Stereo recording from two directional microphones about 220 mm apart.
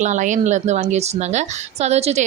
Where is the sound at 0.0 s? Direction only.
35° right (ahead or behind).